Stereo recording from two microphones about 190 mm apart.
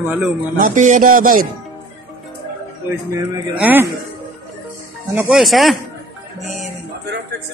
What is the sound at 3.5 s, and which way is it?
Speech, 10° right (ahead or behind).